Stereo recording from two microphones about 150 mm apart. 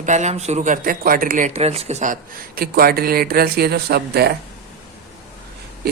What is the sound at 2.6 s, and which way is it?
Speech, 90° right.